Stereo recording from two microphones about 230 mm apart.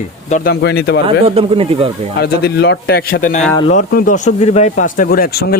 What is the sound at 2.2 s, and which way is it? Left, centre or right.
A man's voice, left.